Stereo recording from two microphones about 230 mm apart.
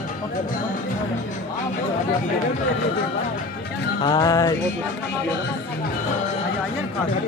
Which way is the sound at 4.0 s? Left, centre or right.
Centre.